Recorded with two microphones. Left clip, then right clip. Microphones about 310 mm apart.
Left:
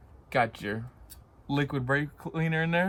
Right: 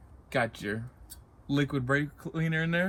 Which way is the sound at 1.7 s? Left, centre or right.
Left.